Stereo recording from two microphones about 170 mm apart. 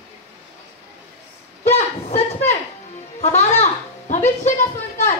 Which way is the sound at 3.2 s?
40° left (ahead or behind).